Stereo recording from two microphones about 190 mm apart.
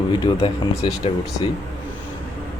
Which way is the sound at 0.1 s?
25° left (ahead or behind).